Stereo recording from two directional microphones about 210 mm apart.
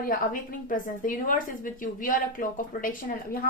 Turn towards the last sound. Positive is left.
turn(degrees=40)  # may be behind; listen again after turning